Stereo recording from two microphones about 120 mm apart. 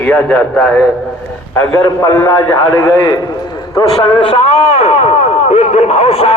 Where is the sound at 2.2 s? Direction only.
25° left (ahead or behind); by 6.3 s 55° left (ahead or behind).